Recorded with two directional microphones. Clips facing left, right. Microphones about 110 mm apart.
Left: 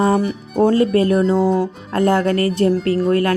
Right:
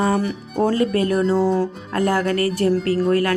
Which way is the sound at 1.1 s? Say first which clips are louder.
Left 3 dB; centre (ahead or behind).